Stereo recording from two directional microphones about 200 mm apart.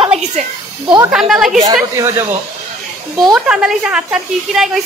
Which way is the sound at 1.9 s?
15° right (ahead or behind).